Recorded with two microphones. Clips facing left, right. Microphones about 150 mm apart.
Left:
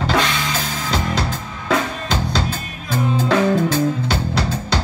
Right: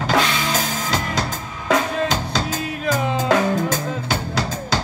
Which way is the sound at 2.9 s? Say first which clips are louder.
Left 1 dB; 90° right.